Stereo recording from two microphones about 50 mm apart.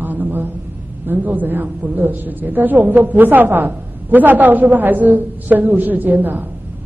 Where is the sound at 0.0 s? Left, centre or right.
Right.